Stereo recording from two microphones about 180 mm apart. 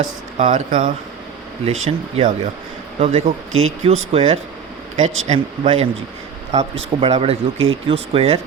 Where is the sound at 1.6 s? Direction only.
35° right (ahead or behind).